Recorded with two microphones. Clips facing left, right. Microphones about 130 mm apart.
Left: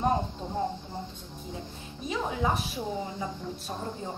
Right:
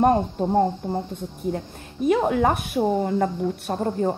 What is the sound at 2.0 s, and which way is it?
A woman's voice, 60° right (ahead or behind).